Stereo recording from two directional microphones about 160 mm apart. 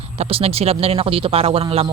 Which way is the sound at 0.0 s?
35° right (ahead or behind).